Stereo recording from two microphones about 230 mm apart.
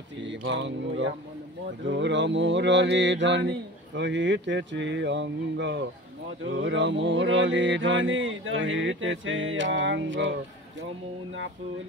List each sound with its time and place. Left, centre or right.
0.2 s mantra: right